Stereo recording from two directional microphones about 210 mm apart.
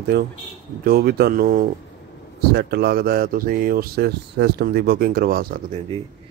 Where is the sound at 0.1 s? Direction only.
50° right (ahead or behind).